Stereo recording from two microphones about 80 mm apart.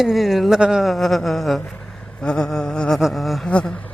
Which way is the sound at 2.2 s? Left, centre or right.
Centre.